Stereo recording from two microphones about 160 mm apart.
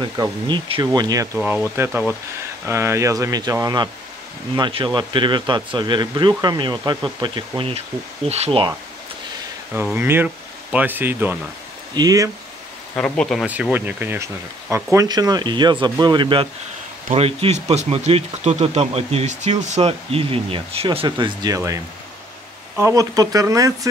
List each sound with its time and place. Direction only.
0.0 s speech: 30° right (ahead or behind)
9.9 s speech: 15° right (ahead or behind)
11.9 s speech: 25° right (ahead or behind)
12.9 s speech: 5° left (ahead or behind)
13.5 s speech: 10° right (ahead or behind)